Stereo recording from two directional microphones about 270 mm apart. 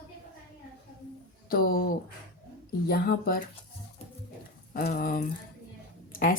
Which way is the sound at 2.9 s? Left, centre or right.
Left.